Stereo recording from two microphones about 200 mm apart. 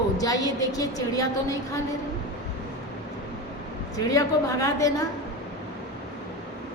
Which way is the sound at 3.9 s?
15° left (ahead or behind).